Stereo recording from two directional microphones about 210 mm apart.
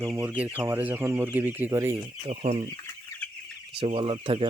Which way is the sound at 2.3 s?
30° right (ahead or behind).